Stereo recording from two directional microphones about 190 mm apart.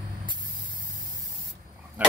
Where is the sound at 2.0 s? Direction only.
10° right (ahead or behind).